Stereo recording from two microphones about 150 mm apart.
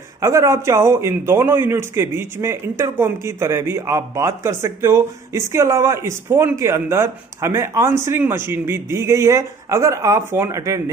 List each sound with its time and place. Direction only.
0.2 s a man's voice: 20° right (ahead or behind)